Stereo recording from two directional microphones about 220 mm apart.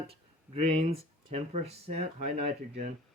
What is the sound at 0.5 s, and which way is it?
Speech, 25° right (ahead or behind).